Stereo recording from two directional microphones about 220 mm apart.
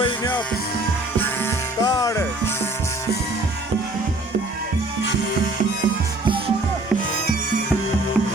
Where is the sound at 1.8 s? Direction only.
15° left (ahead or behind).